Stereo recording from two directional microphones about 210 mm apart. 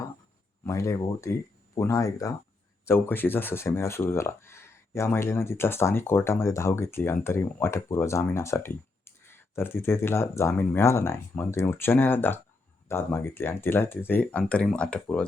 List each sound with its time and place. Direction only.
0.6 s speech: 15° left (ahead or behind)